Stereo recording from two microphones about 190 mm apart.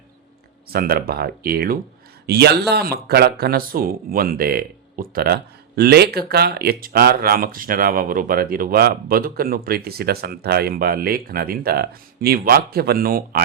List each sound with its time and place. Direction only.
0.7 s speech: 55° right (ahead or behind)